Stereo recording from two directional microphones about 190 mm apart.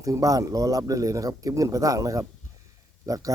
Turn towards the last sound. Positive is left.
turn(degrees=-20)  # may be behind; listen again after turning